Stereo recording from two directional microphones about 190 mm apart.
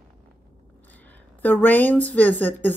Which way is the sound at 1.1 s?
10° left (ahead or behind).